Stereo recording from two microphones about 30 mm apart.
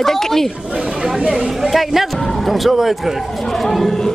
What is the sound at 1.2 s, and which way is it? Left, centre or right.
Speech, right.